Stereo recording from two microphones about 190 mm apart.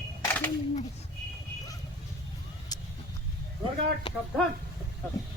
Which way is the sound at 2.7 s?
20° left (ahead or behind).